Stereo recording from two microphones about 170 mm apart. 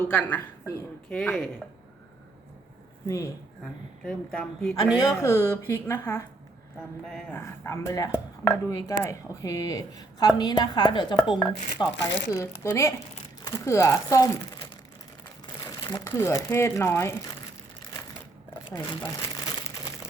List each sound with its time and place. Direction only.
0.0 s speech: 10° left (ahead or behind)
4.0 s speech: 5° left (ahead or behind)
4.9 s speech: 20° left (ahead or behind)
7.0 s speech: centre (ahead or behind)
7.3 s a woman's voice: 15° left (ahead or behind)
11.9 s speech: 90° left
12.3 s a woman's voice: 20° left (ahead or behind)
15.9 s speech: 20° left (ahead or behind)
18.7 s crumpling: 20° left (ahead or behind)